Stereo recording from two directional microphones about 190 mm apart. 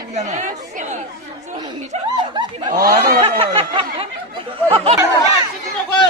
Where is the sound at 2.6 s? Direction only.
45° right (ahead or behind).